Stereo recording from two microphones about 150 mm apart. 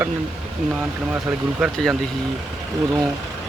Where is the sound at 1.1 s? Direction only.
10° right (ahead or behind).